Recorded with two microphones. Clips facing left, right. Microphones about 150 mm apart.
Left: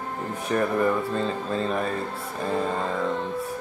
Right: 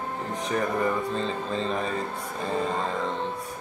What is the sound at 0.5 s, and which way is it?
Mantra, 5° left (ahead or behind).